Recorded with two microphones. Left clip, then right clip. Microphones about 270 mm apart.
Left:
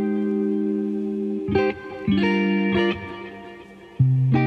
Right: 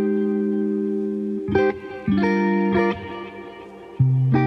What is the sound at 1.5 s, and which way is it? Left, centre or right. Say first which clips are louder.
Music: right 3 dB; centre.